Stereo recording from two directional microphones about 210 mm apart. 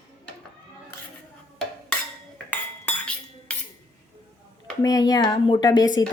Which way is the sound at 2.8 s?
5° left (ahead or behind).